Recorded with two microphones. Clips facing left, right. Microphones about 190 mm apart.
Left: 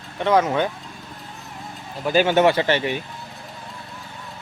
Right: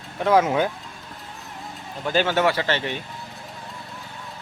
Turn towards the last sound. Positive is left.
turn(degrees=15)  # may be behind; listen again after turning